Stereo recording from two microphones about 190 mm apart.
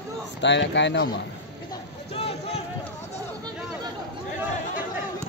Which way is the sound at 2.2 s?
35° left (ahead or behind).